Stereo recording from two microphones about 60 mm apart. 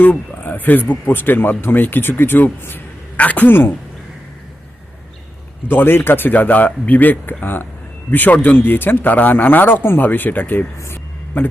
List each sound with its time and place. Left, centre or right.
0.0 s speech: left
5.6 s a man's voice: left
10.8 s speech: left
11.3 s speech: left